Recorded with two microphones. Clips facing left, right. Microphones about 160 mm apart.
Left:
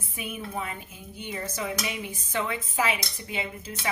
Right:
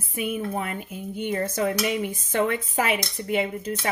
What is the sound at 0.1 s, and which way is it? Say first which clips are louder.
A woman's voice: right 8 dB; 55° right (ahead or behind).